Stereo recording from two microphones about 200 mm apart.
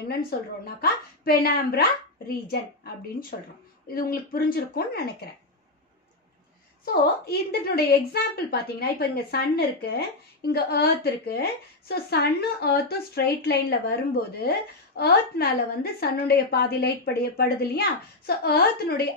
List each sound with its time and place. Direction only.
0.3 s a woman's voice: 50° left (ahead or behind)
6.8 s a woman's voice: 50° left (ahead or behind)